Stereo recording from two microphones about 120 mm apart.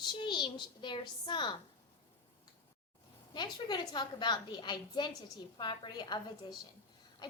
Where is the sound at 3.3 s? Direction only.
35° left (ahead or behind).